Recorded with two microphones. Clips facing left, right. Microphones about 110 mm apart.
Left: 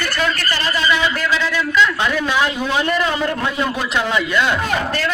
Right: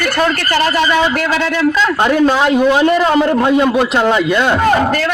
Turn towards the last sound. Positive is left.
turn(degrees=-55)  # may be behind; listen again after turning